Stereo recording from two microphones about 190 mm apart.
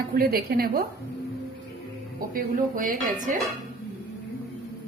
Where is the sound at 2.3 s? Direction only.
45° right (ahead or behind).